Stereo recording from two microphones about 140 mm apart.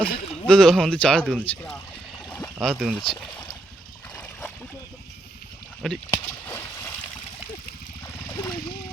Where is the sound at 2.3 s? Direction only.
15° left (ahead or behind).